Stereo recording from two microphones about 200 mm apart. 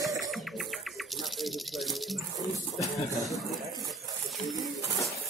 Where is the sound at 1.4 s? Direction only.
Centre (ahead or behind).